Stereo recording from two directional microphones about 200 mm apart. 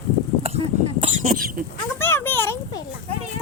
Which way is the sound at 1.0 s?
35° right (ahead or behind).